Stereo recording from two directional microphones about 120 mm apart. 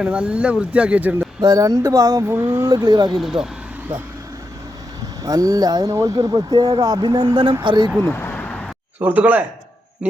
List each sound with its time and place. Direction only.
0.0 s speech: 10° right (ahead or behind)
1.4 s speech: 30° right (ahead or behind)
2.2 s speech: 20° right (ahead or behind)
2.6 s speech: 35° right (ahead or behind)
3.2 s speech: 5° right (ahead or behind)
5.2 s speech: 30° right (ahead or behind)
8.0 s a sound: 15° left (ahead or behind)
9.0 s speech: 15° right (ahead or behind)
10.0 s music: 10° right (ahead or behind)